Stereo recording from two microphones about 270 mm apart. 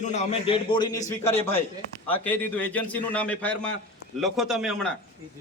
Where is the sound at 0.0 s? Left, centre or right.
Left.